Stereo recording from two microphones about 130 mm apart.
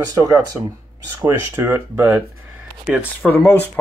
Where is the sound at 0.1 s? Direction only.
25° right (ahead or behind).